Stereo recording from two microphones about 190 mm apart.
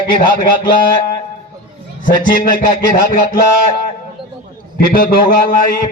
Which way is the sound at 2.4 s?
45° left (ahead or behind).